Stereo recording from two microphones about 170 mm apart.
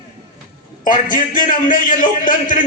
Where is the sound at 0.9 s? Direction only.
50° left (ahead or behind).